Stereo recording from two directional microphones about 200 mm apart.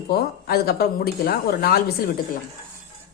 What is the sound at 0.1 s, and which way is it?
Speech, 50° left (ahead or behind).